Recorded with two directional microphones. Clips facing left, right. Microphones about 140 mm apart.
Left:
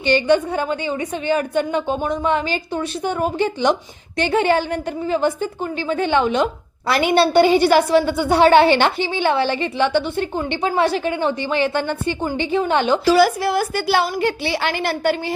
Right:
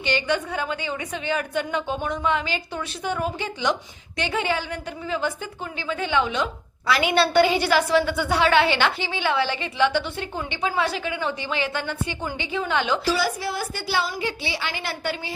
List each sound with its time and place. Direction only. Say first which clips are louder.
0.0 s a woman's voice: left 8 dB; 50° left (ahead or behind)
13.1 s a woman's voice: left 10 dB; 75° left (ahead or behind)